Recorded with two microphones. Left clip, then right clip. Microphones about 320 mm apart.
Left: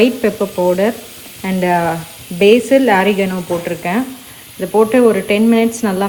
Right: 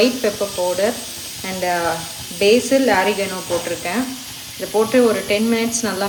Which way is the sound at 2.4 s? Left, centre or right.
Left.